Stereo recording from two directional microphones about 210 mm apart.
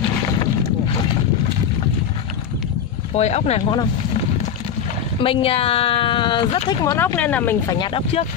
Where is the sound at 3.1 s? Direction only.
30° left (ahead or behind).